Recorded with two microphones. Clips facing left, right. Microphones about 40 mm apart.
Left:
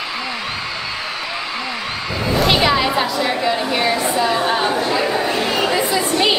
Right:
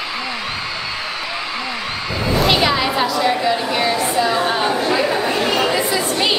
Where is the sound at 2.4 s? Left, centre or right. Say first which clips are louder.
Left 1 dB; centre.